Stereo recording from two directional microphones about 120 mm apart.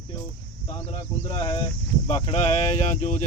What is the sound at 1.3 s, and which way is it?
Speech, 40° left (ahead or behind).